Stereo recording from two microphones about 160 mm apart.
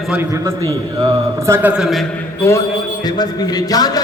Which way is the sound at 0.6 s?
20° right (ahead or behind).